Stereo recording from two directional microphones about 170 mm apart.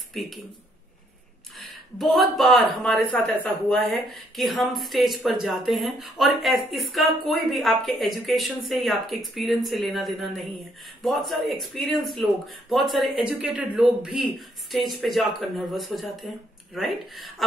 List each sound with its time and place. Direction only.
0.2 s speech: centre (ahead or behind)
2.0 s speech: centre (ahead or behind)